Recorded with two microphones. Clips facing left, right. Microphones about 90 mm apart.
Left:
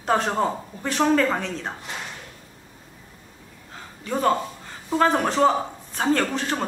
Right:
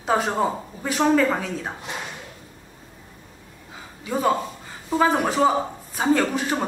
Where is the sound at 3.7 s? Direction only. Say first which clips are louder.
Right 1 dB; 5° right (ahead or behind).